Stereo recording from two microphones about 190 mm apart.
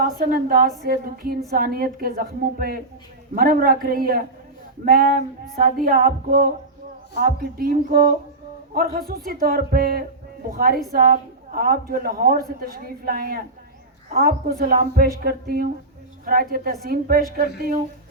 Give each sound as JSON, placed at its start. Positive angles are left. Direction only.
{"t": 0.0, "sound": "a woman's voice", "side_deg": -50}